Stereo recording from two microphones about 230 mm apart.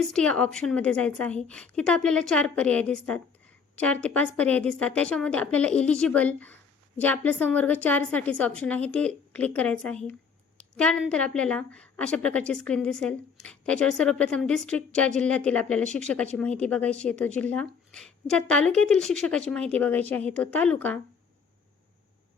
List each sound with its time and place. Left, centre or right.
0.1 s a woman's voice: centre